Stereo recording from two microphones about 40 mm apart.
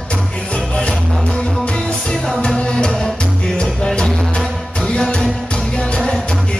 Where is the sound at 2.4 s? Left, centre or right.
Left.